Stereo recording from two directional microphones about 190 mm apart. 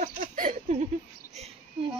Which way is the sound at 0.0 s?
45° right (ahead or behind).